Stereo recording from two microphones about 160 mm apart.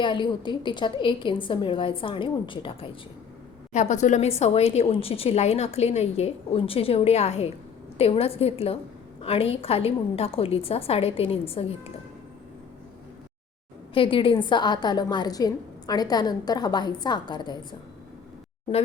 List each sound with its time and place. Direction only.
0.0 s a woman's voice: 30° left (ahead or behind)
3.7 s a woman's voice: 45° left (ahead or behind)
13.9 s a woman's voice: 35° left (ahead or behind)